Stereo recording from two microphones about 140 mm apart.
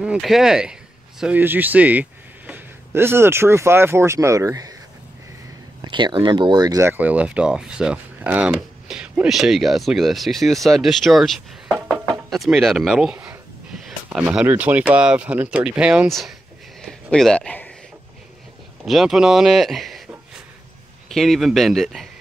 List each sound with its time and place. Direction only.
0.0 s a man's voice: 5° right (ahead or behind); by 4.7 s 25° right (ahead or behind)
5.8 s speech: 35° right (ahead or behind)
6.9 s speech: 10° right (ahead or behind)
16.8 s a sound: 5° left (ahead or behind)
18.9 s speech: centre (ahead or behind)
21.1 s speech: centre (ahead or behind)